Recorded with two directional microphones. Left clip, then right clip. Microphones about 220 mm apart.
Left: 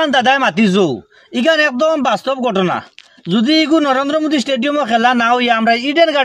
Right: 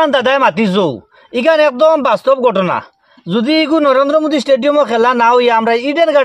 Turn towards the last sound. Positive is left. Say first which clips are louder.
# right 2 dB
turn(degrees=-30)  # may be behind; listen again after turning